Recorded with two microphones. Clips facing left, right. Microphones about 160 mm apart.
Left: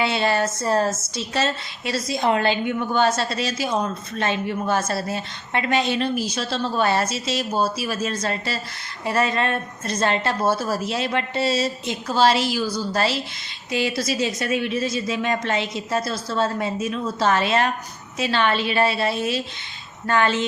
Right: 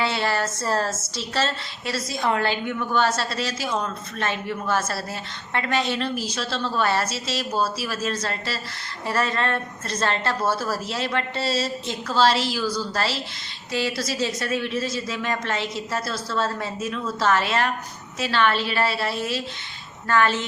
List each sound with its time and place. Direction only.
0.0 s a woman's voice: 20° left (ahead or behind)